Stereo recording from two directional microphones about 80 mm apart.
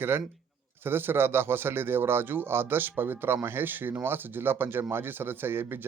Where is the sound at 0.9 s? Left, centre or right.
Right.